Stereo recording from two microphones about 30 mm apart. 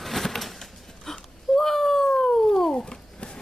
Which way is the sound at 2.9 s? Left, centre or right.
Left.